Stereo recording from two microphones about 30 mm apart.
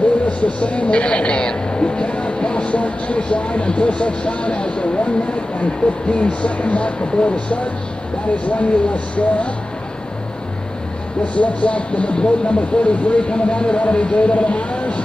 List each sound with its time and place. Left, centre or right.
0.4 s speech: left
11.3 s speech: left